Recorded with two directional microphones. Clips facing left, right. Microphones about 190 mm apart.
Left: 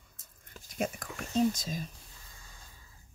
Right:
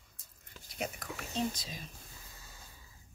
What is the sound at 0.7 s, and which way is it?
Speech, 45° left (ahead or behind).